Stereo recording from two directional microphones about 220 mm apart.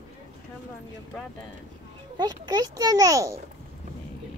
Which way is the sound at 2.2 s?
20° right (ahead or behind).